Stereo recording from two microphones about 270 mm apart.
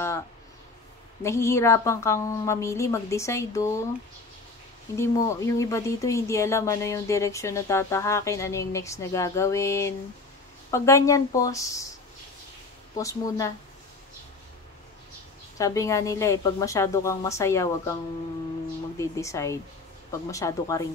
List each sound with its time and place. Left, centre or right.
1.2 s speech: centre
4.9 s speech: centre
12.9 s speech: centre
15.5 s speech: centre
18.9 s speech: centre